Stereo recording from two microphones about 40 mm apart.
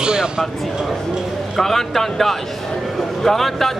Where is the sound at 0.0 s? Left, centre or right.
Right.